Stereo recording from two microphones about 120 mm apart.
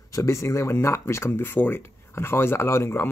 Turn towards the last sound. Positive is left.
turn(degrees=20)  # may be behind; listen again after turning